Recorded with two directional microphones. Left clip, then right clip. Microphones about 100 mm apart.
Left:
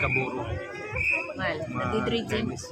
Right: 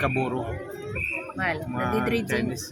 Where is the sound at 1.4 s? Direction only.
35° right (ahead or behind).